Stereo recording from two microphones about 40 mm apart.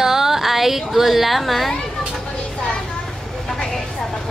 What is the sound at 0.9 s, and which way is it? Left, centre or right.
Speech, centre.